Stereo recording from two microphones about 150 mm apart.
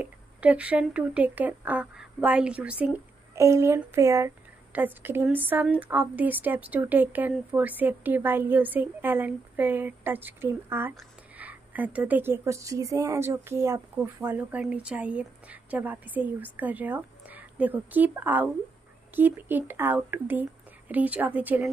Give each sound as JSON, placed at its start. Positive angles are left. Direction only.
{"t": 0.0, "sound": "speech", "side_deg": -10}
{"t": 3.3, "sound": "a woman's voice", "side_deg": -20}